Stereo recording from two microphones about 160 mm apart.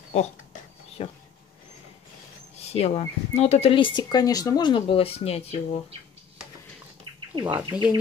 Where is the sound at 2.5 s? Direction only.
40° left (ahead or behind).